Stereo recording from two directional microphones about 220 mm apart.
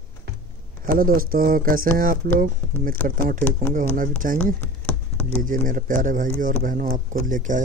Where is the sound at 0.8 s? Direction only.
40° right (ahead or behind).